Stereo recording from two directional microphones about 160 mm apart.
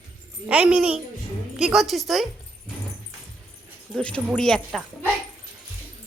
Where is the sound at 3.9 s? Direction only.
5° left (ahead or behind).